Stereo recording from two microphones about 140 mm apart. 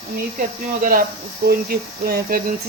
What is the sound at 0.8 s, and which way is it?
Speech, 90° right.